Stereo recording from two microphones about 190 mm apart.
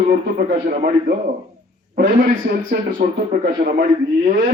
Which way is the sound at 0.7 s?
50° right (ahead or behind).